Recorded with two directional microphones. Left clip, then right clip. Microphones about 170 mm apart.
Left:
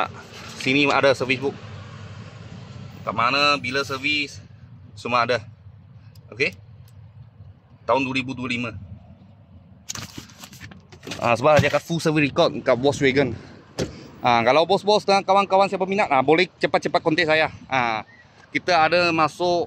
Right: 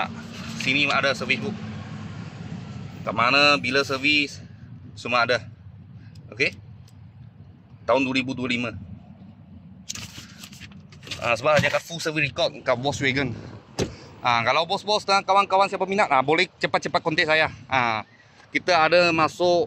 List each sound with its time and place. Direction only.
0.6 s speech: 60° left (ahead or behind); by 1.5 s 40° left (ahead or behind)
3.1 s speech: centre (ahead or behind)
4.9 s speech: 20° left (ahead or behind)
7.8 s speech: 15° left (ahead or behind)
11.1 s speech: 35° left (ahead or behind); by 13.5 s 70° left (ahead or behind)
13.9 s speech: 50° left (ahead or behind); by 19.6 s 15° left (ahead or behind)